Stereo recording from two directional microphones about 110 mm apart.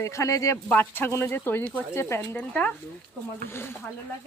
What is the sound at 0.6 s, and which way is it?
Speech, 15° left (ahead or behind).